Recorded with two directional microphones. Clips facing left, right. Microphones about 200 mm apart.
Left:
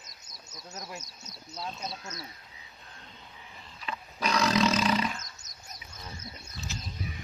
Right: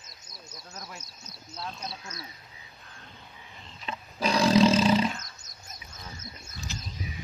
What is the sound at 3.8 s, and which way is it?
Roaring cats, 30° right (ahead or behind).